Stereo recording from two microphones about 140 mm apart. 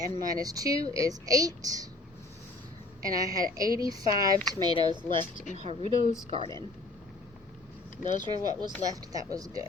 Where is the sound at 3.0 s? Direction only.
25° right (ahead or behind).